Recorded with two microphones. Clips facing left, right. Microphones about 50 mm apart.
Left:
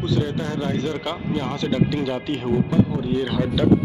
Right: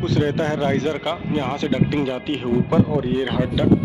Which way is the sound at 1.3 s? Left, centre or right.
Right.